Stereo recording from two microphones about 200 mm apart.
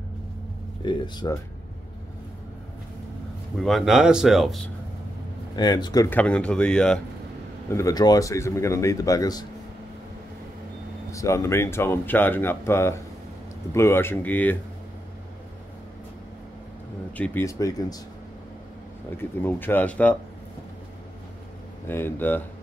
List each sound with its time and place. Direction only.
0.8 s speech: 20° left (ahead or behind)
3.5 s speech: centre (ahead or behind)
5.6 s speech: 20° left (ahead or behind)
6.0 s speech: 5° left (ahead or behind)
7.7 s speech: 15° left (ahead or behind)
11.1 s speech: 15° left (ahead or behind)
17.2 s speech: 10° left (ahead or behind)
19.4 s speech: 10° left (ahead or behind)
21.8 s speech: 10° left (ahead or behind)